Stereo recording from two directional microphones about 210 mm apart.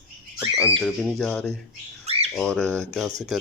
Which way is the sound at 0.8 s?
Centre (ahead or behind).